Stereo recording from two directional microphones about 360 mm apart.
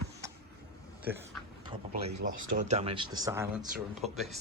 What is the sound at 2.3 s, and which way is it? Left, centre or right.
Speech, right.